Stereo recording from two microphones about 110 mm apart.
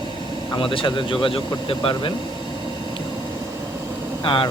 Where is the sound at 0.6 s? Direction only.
50° left (ahead or behind).